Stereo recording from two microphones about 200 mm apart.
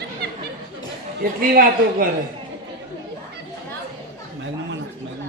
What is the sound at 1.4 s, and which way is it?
Speech, 45° right (ahead or behind).